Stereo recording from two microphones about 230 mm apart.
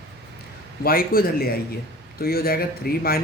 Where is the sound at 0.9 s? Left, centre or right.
Left.